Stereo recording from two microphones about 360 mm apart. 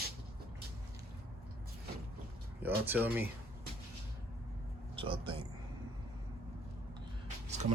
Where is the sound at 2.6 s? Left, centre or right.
Centre.